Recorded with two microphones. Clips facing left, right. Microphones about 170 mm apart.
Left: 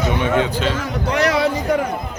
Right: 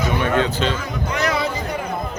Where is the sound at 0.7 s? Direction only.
75° left (ahead or behind).